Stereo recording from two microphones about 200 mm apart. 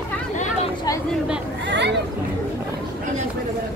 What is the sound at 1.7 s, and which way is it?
Chatter, 60° right (ahead or behind).